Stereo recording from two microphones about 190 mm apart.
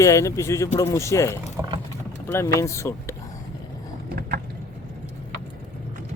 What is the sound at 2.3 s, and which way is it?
Speech, 15° left (ahead or behind).